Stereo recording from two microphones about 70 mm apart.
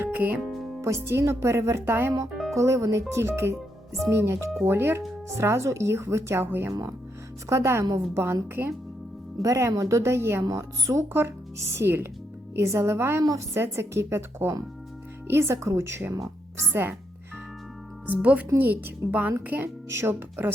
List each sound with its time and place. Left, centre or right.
0.0 s music: right
0.8 s speech: right
2.6 s speech: right
7.5 s speech: right
9.4 s speech: right
10.0 s speech: right
10.4 s speech: right
16.1 s music: right
18.0 s speech: right
19.6 s speech: right